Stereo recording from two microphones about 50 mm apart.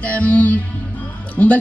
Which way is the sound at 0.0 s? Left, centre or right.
Left.